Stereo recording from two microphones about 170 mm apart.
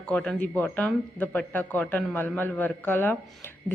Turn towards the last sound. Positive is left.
turn(degrees=10)  # may be behind; listen again after turning